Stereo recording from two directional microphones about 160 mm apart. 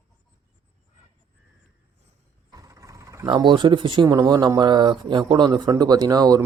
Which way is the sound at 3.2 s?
30° right (ahead or behind).